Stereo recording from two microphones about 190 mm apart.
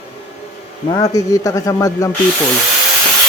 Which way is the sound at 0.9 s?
20° left (ahead or behind).